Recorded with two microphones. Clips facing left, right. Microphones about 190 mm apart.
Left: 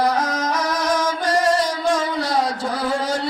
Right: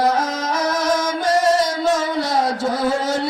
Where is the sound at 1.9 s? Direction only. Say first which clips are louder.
Right 1 dB; 10° right (ahead or behind).